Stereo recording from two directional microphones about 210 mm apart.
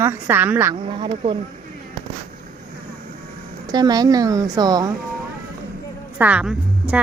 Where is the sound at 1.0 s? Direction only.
25° right (ahead or behind).